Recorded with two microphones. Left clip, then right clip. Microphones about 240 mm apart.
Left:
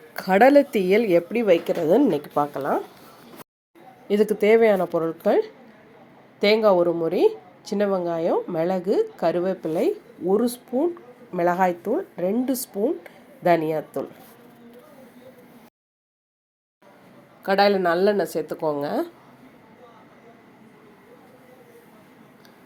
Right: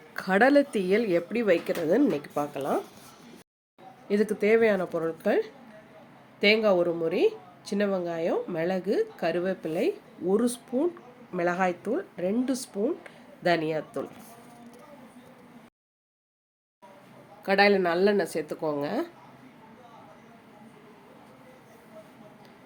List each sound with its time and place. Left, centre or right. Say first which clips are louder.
0.1 s speech: left 6 dB; centre
4.1 s speech: left 6 dB; centre
17.4 s speech: left 3 dB; centre